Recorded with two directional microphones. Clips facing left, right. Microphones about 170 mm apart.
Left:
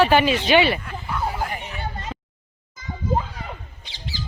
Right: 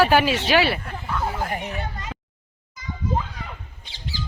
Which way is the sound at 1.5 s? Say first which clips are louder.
Right 4 dB; 35° right (ahead or behind).